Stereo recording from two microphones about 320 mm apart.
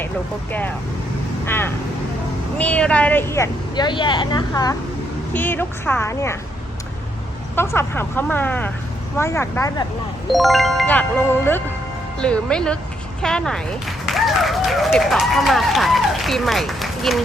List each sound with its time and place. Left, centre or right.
1.5 s speech: centre
7.5 s speech: centre
12.2 s speech: centre